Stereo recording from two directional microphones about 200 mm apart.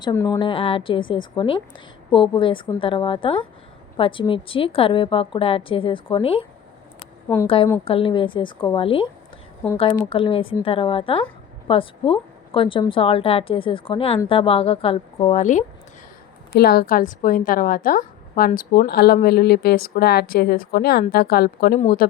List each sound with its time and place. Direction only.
0.0 s a woman's voice: 15° left (ahead or behind)
7.4 s a woman's voice: 25° left (ahead or behind)
16.5 s speech: 50° left (ahead or behind)